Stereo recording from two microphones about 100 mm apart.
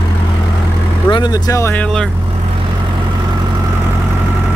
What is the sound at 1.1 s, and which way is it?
Speech, 50° left (ahead or behind).